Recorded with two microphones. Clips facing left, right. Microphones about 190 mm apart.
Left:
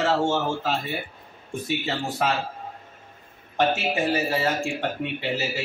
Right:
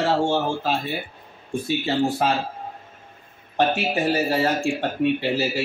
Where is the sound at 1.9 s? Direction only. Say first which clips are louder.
Right 6 dB; 30° right (ahead or behind).